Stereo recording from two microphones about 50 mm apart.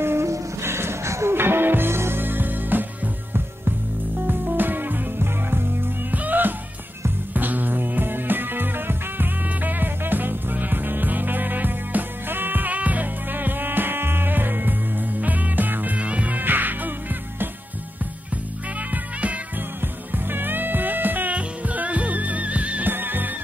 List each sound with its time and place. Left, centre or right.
0.0 s music: right
1.3 s music: right
4.3 s music: right
6.1 s music: right
20.1 s music: right
22.8 s music: right